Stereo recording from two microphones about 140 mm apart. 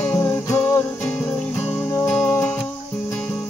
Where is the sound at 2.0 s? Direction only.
5° left (ahead or behind).